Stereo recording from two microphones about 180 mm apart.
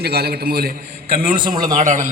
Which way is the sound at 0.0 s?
60° right (ahead or behind).